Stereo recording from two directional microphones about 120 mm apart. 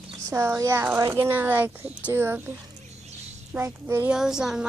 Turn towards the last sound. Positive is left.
turn(degrees=-5)  # may be behind; listen again after turning